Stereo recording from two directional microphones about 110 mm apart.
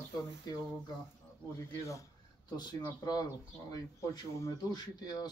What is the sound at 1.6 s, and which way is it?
Speech, 25° left (ahead or behind).